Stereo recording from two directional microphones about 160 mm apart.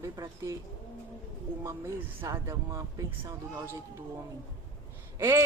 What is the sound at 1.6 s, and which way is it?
Speech, 15° right (ahead or behind).